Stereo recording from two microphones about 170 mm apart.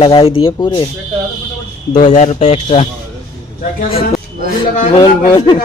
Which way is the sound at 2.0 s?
45° left (ahead or behind).